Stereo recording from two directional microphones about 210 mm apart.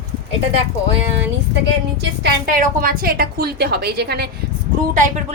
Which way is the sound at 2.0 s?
45° right (ahead or behind).